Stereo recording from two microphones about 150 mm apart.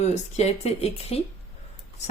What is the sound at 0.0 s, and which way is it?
A woman's voice, 45° left (ahead or behind).